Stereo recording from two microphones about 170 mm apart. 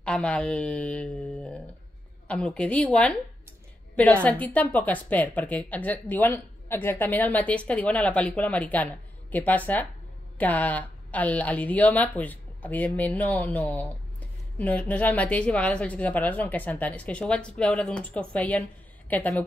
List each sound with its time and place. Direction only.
0.0 s a woman's voice: 5° left (ahead or behind)